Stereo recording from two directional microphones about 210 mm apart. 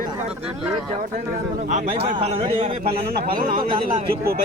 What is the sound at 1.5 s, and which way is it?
A man's voice, 35° right (ahead or behind).